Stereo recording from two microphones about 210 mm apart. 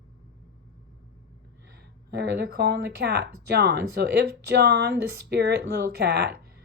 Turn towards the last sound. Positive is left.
turn(degrees=-50)  # may be behind; listen again after turning